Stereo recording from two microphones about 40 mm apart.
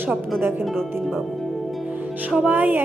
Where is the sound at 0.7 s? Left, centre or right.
Centre.